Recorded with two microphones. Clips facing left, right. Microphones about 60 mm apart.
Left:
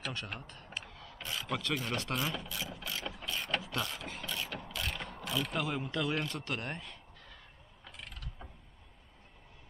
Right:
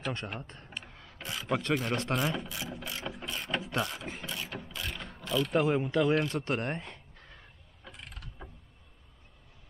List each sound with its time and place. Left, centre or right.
0.4 s speech: right
0.8 s rub: right
1.5 s speech: right
2.5 s ratchet: right
3.3 s mechanisms: centre
3.6 s mechanisms: right
4.0 s speech: right
4.4 s ratchet: centre
5.2 s mechanisms: centre
5.5 s speech: right
6.1 s speech: centre
6.4 s speech: right
8.0 s mechanisms: right